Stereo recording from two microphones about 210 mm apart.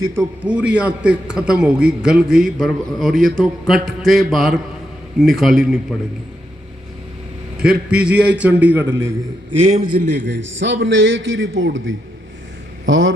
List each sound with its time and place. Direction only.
0.1 s a man's voice: 10° right (ahead or behind)
7.6 s a man's voice: 5° right (ahead or behind)
9.6 s a man's voice: 40° right (ahead or behind)
10.1 s a man's voice: 55° right (ahead or behind)